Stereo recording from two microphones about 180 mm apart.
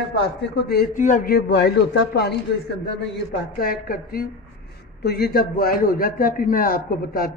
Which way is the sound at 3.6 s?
55° left (ahead or behind).